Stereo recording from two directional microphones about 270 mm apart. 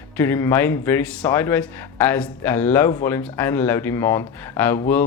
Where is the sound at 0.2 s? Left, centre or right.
Centre.